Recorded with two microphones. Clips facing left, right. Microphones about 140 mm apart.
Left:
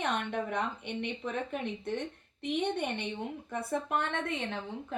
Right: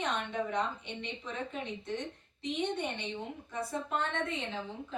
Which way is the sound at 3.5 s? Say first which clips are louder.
Left 3 dB; 55° left (ahead or behind).